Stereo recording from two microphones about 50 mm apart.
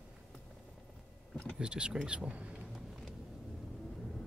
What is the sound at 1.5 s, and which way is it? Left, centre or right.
Speech, centre.